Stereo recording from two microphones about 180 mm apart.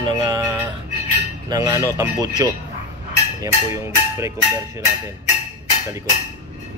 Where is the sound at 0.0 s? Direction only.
25° right (ahead or behind).